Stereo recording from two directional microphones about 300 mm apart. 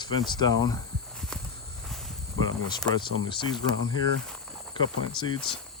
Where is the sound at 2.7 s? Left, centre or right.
Centre.